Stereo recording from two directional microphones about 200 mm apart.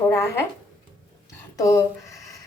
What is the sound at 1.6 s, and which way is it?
Speech, 15° left (ahead or behind).